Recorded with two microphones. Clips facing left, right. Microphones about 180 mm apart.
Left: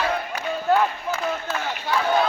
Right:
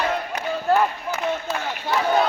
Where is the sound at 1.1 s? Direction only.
20° right (ahead or behind).